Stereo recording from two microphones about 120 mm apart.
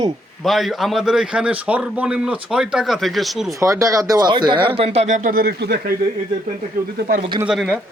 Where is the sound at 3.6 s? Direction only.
25° right (ahead or behind); by 5.3 s 90° right.